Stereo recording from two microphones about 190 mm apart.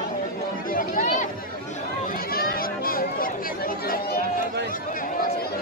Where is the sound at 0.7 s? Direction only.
45° left (ahead or behind).